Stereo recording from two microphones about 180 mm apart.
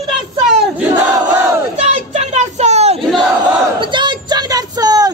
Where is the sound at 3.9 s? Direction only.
25° right (ahead or behind).